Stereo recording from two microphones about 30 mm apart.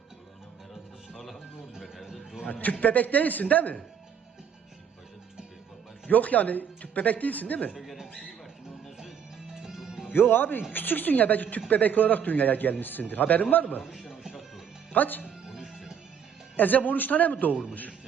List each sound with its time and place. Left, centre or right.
1.1 s music: centre
1.7 s a sound: centre
2.5 s a man's voice: left
6.1 s speech: left
7.7 s speech: centre
9.5 s music: centre
10.4 s a woman's voice: left
12.8 s a man's voice: left
14.1 s music: centre
14.9 s a man's voice: left
15.2 s music: centre
16.6 s a man's voice: left